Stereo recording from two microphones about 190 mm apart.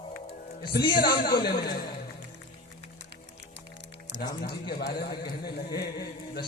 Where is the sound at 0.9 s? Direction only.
55° left (ahead or behind).